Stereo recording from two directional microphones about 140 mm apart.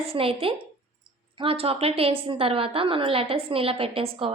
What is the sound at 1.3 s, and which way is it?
A woman's voice, 40° right (ahead or behind).